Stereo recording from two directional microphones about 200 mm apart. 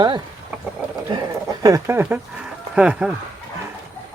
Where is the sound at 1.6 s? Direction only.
15° right (ahead or behind).